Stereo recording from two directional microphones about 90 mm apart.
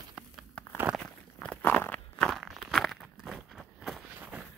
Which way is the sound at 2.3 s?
Centre (ahead or behind).